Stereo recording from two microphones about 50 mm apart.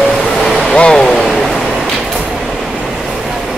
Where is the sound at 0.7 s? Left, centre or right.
Centre.